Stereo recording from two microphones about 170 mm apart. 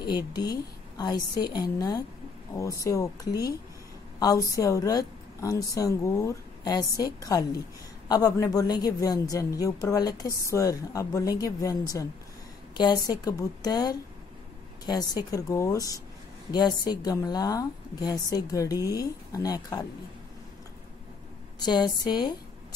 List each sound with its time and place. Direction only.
0.0 s a woman's voice: 25° left (ahead or behind)
12.7 s a woman's voice: 20° left (ahead or behind)
15.3 s a woman's voice: 20° left (ahead or behind)
21.5 s a woman's voice: 25° left (ahead or behind)